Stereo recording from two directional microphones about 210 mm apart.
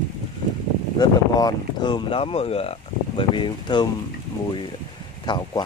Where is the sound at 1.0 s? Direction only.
20° left (ahead or behind).